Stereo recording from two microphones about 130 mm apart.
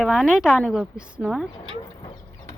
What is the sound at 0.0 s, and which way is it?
A woman's voice, 5° right (ahead or behind).